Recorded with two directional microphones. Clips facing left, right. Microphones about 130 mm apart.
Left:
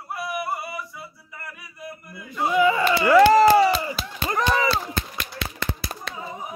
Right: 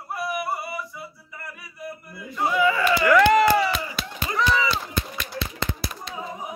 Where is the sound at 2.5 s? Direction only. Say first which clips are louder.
Left 2 dB; 20° left (ahead or behind).